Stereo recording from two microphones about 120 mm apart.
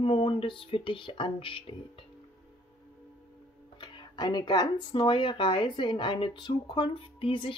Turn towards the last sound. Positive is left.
turn(degrees=45)  # may be behind; listen again after turning